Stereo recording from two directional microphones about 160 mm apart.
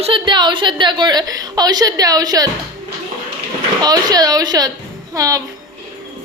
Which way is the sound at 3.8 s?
25° right (ahead or behind).